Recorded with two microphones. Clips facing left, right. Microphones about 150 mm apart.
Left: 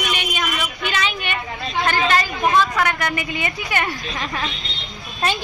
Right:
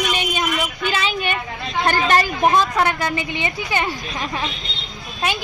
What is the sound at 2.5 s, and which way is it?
Speech, 25° right (ahead or behind).